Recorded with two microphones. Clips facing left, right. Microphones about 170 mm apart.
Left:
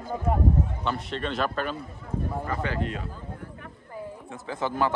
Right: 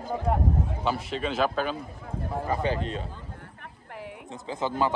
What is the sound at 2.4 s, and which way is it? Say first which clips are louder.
Speech: right 3 dB; 20° right (ahead or behind).